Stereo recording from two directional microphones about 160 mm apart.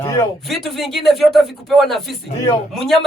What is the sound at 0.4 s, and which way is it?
A woman's voice, centre (ahead or behind).